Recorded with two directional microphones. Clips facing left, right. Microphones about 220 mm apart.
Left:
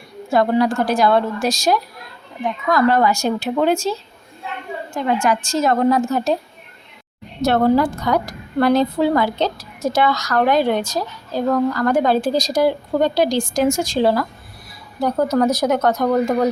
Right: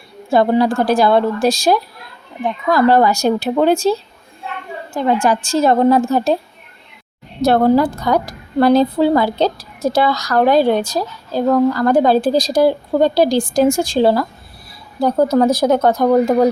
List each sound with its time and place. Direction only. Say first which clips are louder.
0.3 s a woman's voice: right 3 dB; 30° right (ahead or behind)
4.9 s a woman's voice: right 3 dB; 30° right (ahead or behind)
7.4 s a woman's voice: right 3 dB; 35° right (ahead or behind)